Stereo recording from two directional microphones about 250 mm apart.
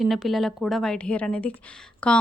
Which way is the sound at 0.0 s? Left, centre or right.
Centre.